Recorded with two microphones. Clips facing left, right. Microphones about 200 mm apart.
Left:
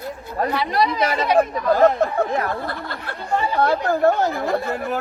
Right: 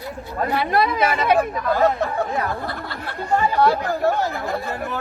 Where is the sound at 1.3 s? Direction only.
35° left (ahead or behind).